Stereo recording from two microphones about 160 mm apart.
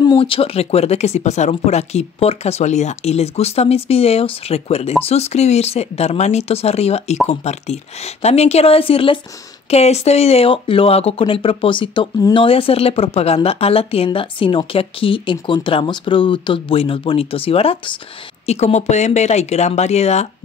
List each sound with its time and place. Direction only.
0.0 s speech: 30° left (ahead or behind)